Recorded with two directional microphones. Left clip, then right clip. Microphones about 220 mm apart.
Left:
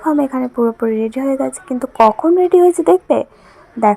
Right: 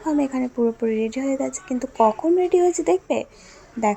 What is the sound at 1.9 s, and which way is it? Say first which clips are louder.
Speech: left 7 dB; 25° left (ahead or behind).